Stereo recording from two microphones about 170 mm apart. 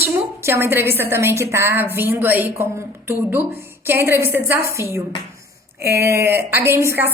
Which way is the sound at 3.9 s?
15° right (ahead or behind).